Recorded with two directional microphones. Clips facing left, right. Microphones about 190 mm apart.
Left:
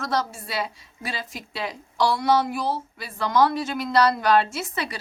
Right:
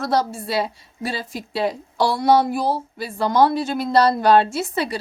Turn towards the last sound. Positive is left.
turn(degrees=-30)  # may be behind; listen again after turning